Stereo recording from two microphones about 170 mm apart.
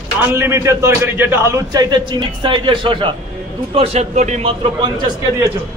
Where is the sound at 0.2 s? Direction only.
15° right (ahead or behind); by 4.5 s 45° right (ahead or behind).